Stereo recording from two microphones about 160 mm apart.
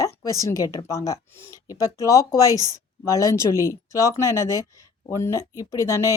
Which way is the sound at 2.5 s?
20° right (ahead or behind).